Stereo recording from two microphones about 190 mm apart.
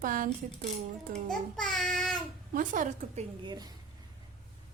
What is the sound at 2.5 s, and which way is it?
Speech, 45° right (ahead or behind).